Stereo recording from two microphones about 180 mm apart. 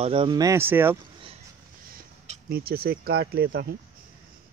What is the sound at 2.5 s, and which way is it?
Speech, 60° right (ahead or behind).